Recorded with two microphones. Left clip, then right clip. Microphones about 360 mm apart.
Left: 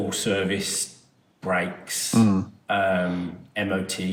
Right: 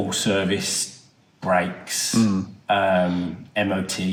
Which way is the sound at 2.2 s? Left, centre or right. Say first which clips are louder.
Left 5 dB; centre.